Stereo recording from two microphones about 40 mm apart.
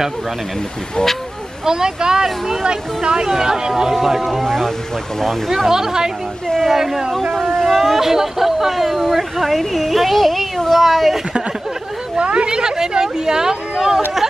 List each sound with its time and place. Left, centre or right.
1.7 s speech: centre
2.2 s speech: centre
2.6 s speech: centre
5.5 s speech: centre
12.2 s speech: right